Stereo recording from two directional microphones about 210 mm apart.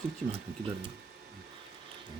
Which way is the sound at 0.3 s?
25° right (ahead or behind).